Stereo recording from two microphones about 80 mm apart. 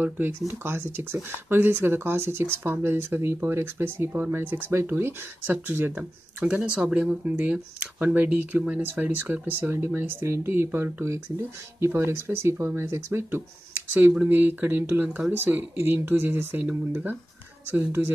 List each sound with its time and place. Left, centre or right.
0.0 s speech: right